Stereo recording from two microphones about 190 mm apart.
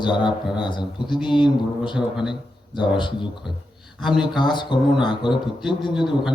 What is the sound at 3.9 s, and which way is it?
Speech, centre (ahead or behind).